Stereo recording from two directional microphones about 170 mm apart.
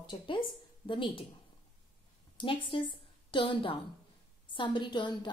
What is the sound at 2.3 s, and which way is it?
Speech, 30° left (ahead or behind).